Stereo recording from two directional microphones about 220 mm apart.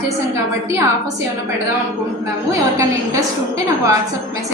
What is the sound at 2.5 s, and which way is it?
A woman's voice, 15° right (ahead or behind).